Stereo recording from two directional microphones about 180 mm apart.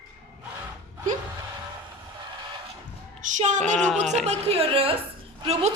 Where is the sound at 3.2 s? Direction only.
40° right (ahead or behind).